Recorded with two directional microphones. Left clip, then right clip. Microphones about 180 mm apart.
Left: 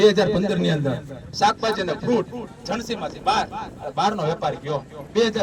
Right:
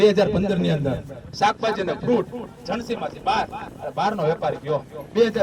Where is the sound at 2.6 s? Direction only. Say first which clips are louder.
Even; 20° left (ahead or behind).